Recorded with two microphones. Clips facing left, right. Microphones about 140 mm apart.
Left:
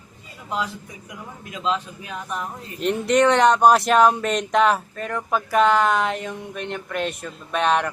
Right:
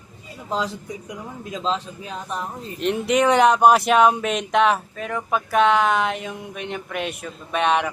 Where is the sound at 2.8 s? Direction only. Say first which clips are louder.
Left 1 dB; centre (ahead or behind).